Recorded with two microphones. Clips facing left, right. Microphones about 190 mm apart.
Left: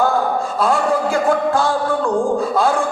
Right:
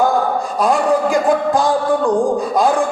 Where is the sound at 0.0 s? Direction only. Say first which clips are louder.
Right 1 dB; 15° right (ahead or behind).